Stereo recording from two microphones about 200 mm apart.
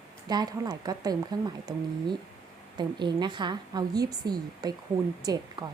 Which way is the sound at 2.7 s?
20° right (ahead or behind).